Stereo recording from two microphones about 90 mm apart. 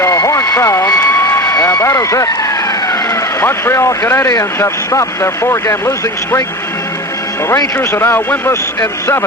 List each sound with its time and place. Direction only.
0.0 s vehicle: 35° left (ahead or behind)
3.4 s speech: 30° left (ahead or behind)
7.8 s a man's voice: 30° left (ahead or behind)